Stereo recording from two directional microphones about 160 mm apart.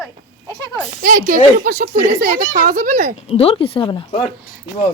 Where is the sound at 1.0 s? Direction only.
60° right (ahead or behind).